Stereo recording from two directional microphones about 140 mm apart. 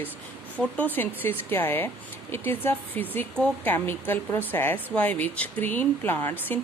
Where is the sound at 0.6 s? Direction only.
5° left (ahead or behind).